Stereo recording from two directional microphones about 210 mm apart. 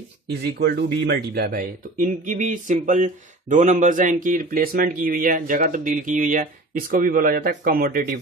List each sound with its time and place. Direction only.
0.4 s speech: 50° right (ahead or behind)